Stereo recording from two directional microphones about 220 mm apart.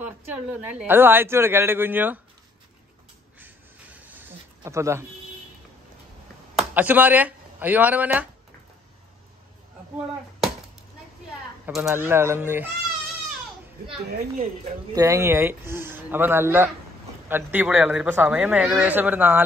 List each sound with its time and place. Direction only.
0.0 s a man's voice: 5° right (ahead or behind)
3.3 s a sound: 10° right (ahead or behind)
6.5 s speech: 5° right (ahead or behind)
11.6 s a man's voice: 10° right (ahead or behind)
14.1 s speech: 30° right (ahead or behind)
15.0 s a man's voice: 15° right (ahead or behind)